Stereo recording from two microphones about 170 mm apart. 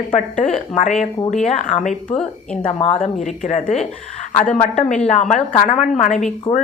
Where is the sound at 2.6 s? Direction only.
35° left (ahead or behind).